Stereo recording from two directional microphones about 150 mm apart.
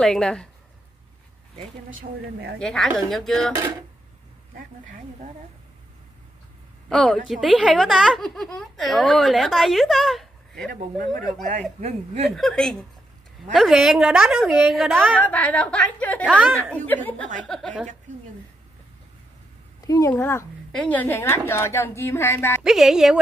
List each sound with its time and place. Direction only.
0.0 s a woman's voice: 5° left (ahead or behind)
2.6 s a woman's voice: 5° left (ahead or behind)
4.6 s speech: 60° right (ahead or behind)
6.9 s a woman's voice: 5° left (ahead or behind)
12.3 s a woman's voice: centre (ahead or behind)
14.9 s a woman's voice: 15° right (ahead or behind)
15.1 s a woman's voice: 10° left (ahead or behind)
19.9 s a woman's voice: 25° left (ahead or behind)
22.6 s a woman's voice: 5° right (ahead or behind)